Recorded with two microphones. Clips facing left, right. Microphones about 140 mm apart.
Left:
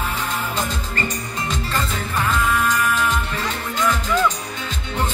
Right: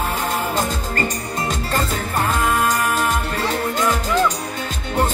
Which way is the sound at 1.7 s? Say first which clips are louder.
Right 3 dB; 40° right (ahead or behind).